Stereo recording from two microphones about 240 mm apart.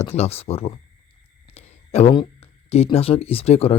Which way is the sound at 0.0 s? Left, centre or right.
Left.